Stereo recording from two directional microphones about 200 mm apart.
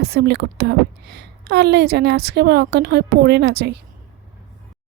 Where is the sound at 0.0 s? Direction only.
55° right (ahead or behind).